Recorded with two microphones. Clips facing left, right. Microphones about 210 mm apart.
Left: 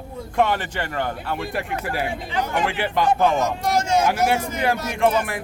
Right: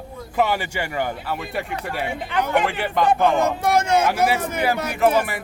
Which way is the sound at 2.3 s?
60° right (ahead or behind).